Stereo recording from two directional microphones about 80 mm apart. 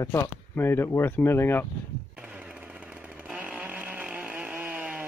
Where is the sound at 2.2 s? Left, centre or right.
Centre.